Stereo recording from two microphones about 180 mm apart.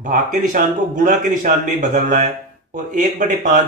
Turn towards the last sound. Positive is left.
turn(degrees=-45)  # may be behind; listen again after turning